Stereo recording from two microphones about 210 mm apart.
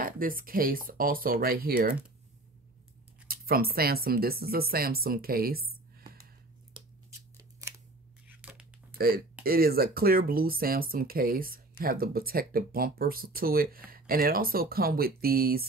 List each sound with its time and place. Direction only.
0.0 s speech: 40° right (ahead or behind)
3.3 s speech: 45° right (ahead or behind)
6.7 s a sound: 15° right (ahead or behind)
8.3 s tearing: 5° right (ahead or behind)
8.9 s speech: 45° right (ahead or behind)